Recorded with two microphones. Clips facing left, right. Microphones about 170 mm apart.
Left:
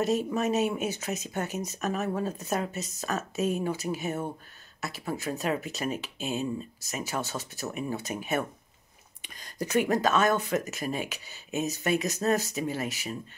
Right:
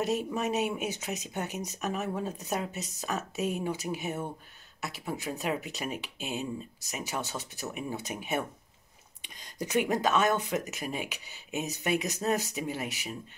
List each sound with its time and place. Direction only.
0.0 s speech: 15° right (ahead or behind)